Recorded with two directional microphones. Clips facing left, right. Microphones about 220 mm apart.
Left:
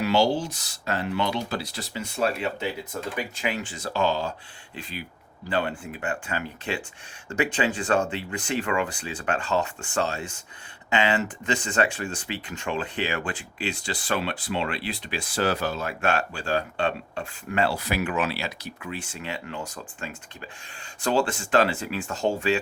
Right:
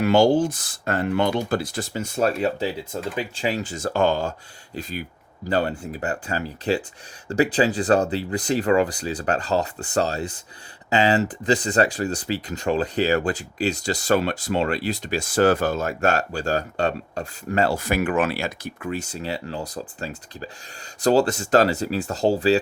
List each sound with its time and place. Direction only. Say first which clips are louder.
0.0 s speech: right 6 dB; 50° right (ahead or behind)
2.9 s speech: right 3 dB; 30° right (ahead or behind)